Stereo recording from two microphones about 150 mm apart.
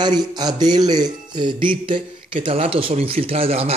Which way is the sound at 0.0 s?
25° right (ahead or behind).